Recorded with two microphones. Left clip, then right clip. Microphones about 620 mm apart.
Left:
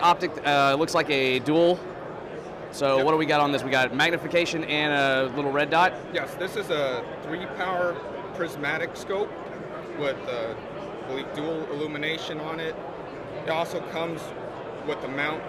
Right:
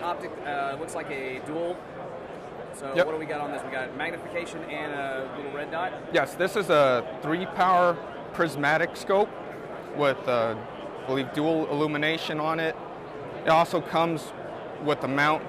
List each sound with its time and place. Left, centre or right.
0.0 s speech: left
2.8 s a man's voice: left
6.1 s a man's voice: right